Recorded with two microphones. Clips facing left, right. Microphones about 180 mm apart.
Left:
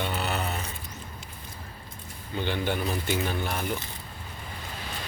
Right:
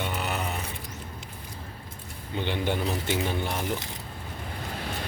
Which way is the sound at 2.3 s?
25° right (ahead or behind).